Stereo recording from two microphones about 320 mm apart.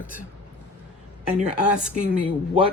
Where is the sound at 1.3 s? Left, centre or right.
Right.